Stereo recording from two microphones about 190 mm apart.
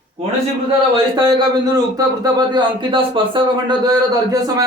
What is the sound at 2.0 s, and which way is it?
Speech, 20° right (ahead or behind).